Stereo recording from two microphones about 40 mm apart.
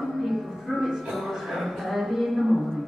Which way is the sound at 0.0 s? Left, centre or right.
Centre.